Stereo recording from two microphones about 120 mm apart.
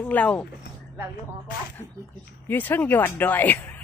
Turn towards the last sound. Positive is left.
turn(degrees=15)  # may be behind; listen again after turning